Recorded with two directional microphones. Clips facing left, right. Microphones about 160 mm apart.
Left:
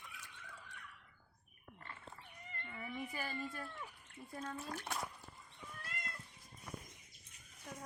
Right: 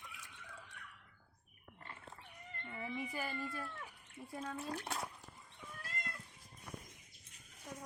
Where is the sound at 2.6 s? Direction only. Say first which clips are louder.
Right 2 dB; 15° right (ahead or behind).